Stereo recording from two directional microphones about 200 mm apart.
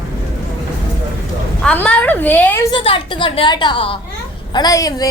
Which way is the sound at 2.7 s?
25° left (ahead or behind).